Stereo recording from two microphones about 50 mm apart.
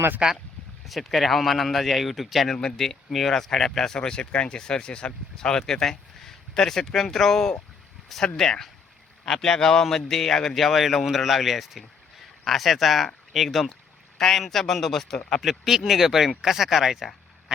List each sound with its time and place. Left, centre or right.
0.2 s speech: centre
0.9 s a man's voice: centre
2.6 s a man's voice: centre